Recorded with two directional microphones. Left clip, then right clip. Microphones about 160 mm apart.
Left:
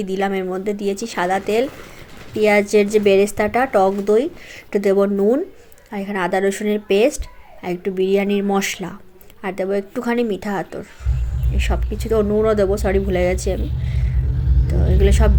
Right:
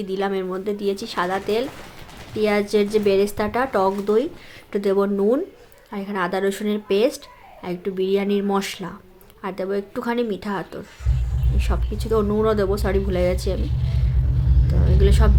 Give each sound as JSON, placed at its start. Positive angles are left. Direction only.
{"t": 0.0, "sound": "speech", "side_deg": 15}
{"t": 14.7, "sound": "speech", "side_deg": 15}